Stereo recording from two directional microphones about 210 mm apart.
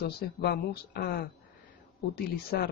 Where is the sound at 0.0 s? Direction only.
50° left (ahead or behind).